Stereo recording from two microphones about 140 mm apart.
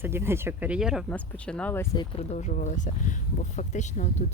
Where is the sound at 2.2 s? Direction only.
55° left (ahead or behind).